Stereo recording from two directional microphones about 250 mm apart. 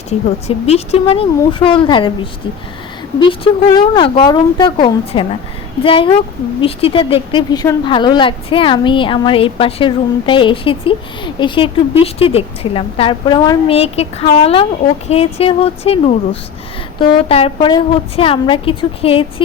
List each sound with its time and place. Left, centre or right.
0.1 s a woman's voice: left
3.2 s a woman's voice: centre